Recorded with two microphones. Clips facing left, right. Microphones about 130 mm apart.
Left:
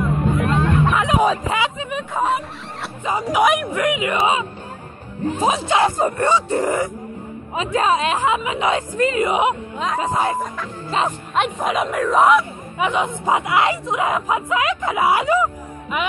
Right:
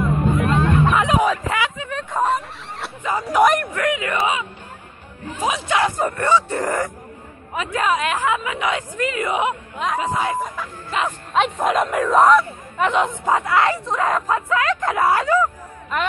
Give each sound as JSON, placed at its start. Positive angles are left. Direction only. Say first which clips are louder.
{"t": 0.4, "sound": "hubbub", "louder": "even", "side_deg": 0}
{"t": 1.2, "sound": "speech", "louder": "left 2 dB", "side_deg": 25}
{"t": 2.1, "sound": "speech", "louder": "right 1 dB", "side_deg": 0}
{"t": 3.0, "sound": "speech", "louder": "right 1 dB", "side_deg": 15}
{"t": 3.7, "sound": "a woman's voice", "louder": "left 2 dB", "side_deg": 15}
{"t": 6.6, "sound": "speech", "louder": "left 2 dB", "side_deg": 10}
{"t": 7.5, "sound": "a woman's voice", "louder": "left 2 dB", "side_deg": 25}
{"t": 9.9, "sound": "speech", "louder": "left 2 dB", "side_deg": 35}
{"t": 11.3, "sound": "speech", "louder": "right 2 dB", "side_deg": 0}